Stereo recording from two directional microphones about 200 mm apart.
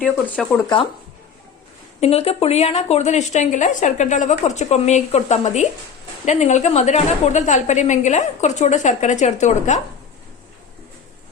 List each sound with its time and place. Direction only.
0.4 s speech: 5° left (ahead or behind)
2.0 s a woman's voice: 30° left (ahead or behind)